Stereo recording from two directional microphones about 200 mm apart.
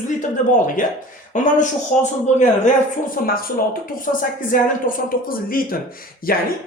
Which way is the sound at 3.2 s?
45° left (ahead or behind).